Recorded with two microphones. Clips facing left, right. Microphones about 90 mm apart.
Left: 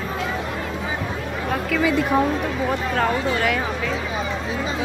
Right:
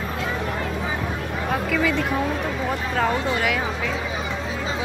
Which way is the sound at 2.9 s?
5° right (ahead or behind).